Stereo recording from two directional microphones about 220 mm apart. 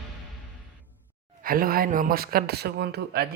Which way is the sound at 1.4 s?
40° right (ahead or behind).